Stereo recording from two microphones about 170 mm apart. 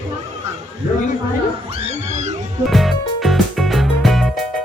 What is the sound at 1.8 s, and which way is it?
Music, 45° right (ahead or behind).